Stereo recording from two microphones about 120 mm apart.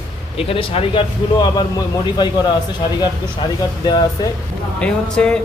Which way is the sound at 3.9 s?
35° left (ahead or behind).